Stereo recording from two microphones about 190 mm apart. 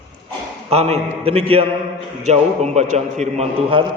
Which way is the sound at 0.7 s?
35° right (ahead or behind).